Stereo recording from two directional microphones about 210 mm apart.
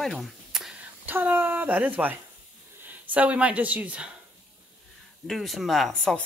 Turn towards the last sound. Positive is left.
turn(degrees=0)  # may be behind; listen again after turning